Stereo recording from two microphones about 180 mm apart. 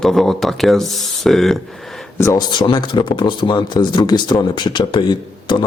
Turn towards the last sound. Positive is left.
turn(degrees=25)  # may be behind; listen again after turning